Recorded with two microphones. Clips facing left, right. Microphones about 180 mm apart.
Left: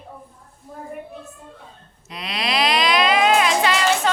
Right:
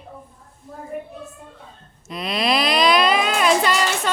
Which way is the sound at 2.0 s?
45° right (ahead or behind).